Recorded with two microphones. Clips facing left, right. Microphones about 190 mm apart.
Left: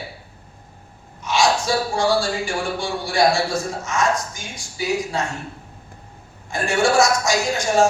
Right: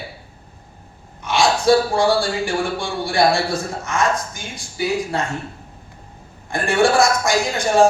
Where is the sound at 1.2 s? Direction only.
55° right (ahead or behind).